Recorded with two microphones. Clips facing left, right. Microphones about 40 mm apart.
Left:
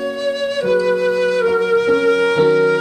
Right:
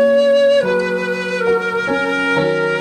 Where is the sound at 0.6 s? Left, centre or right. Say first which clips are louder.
Left 1 dB; right.